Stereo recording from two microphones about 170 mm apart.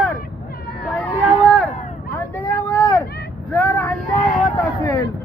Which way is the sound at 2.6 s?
20° left (ahead or behind).